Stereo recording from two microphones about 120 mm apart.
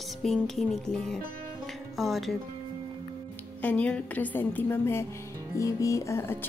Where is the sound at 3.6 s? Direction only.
10° left (ahead or behind).